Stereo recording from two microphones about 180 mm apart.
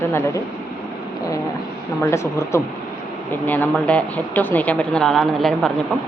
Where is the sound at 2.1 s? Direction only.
15° left (ahead or behind).